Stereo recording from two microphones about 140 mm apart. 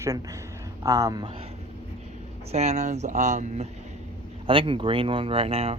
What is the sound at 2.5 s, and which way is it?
Speech, 50° right (ahead or behind).